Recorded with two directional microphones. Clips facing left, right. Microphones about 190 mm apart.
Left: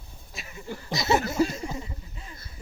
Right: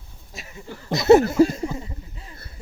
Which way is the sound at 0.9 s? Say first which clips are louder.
Right 12 dB; 60° right (ahead or behind).